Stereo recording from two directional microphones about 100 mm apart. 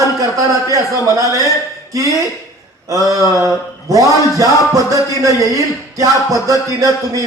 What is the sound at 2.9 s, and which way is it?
Speech, 30° right (ahead or behind).